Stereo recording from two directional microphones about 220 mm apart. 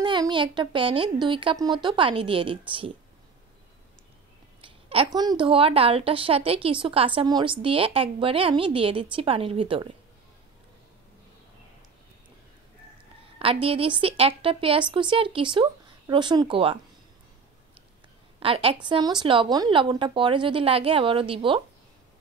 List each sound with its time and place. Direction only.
0.0 s a woman's voice: 20° right (ahead or behind)
4.6 s a woman's voice: 25° right (ahead or behind)
13.4 s a woman's voice: 25° right (ahead or behind)
18.4 s a woman's voice: 25° right (ahead or behind)